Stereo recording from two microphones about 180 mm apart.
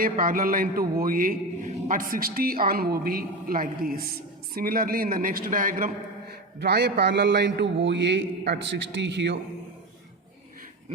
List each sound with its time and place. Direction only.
0.0 s a man's voice: 50° right (ahead or behind)
6.6 s a man's voice: 65° right (ahead or behind)